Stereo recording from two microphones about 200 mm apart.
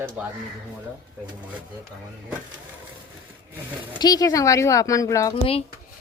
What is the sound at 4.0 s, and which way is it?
Speech, 20° left (ahead or behind).